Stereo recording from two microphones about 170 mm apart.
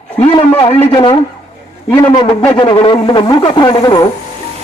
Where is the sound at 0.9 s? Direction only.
30° left (ahead or behind).